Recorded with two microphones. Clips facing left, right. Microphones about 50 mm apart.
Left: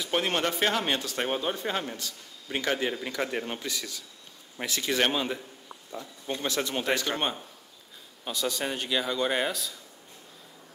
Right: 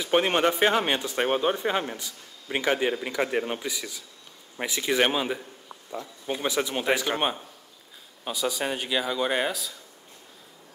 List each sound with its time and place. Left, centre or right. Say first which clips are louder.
0.0 s speech: right 5 dB; right; by 9.8 s centre